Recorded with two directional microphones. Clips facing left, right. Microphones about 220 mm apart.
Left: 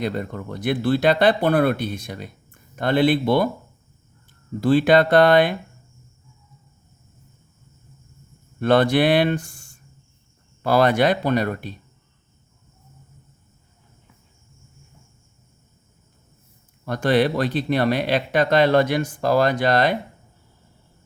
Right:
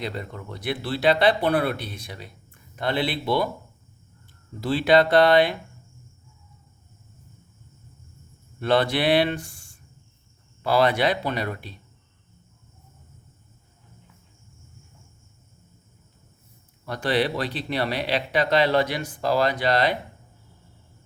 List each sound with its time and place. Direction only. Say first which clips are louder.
0.0 s speech: left 6 dB; 50° left (ahead or behind)
4.6 s speech: left 3 dB; 50° left (ahead or behind)
8.6 s speech: left 5 dB; 50° left (ahead or behind)
16.8 s speech: left 5 dB; 50° left (ahead or behind)